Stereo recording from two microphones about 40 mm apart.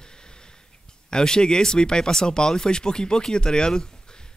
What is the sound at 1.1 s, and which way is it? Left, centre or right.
Speech, centre.